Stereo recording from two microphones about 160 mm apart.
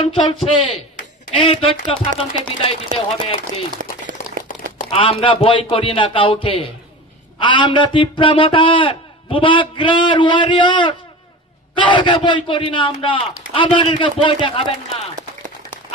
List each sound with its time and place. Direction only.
0.0 s a man's voice: 35° left (ahead or behind)
4.1 s a sound: 60° right (ahead or behind)
4.9 s a man's voice: 35° left (ahead or behind)